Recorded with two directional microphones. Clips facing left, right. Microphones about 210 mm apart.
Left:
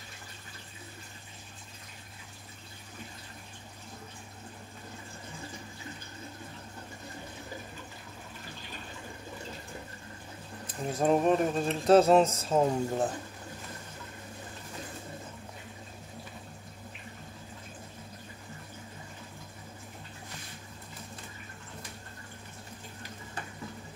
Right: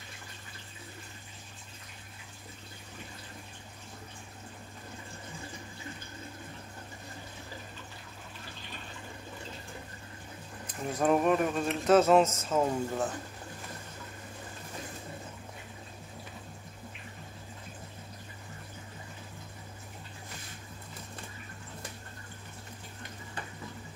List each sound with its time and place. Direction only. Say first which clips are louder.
11.0 s speech: left 1 dB; 30° left (ahead or behind)